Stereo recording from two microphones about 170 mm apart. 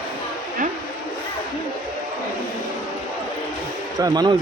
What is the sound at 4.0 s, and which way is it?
Speech, 25° right (ahead or behind).